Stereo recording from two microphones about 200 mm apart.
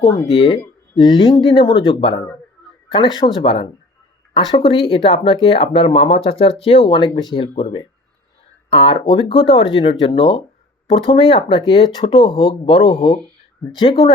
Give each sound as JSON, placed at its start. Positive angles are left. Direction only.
{"t": 0.1, "sound": "speech", "side_deg": 30}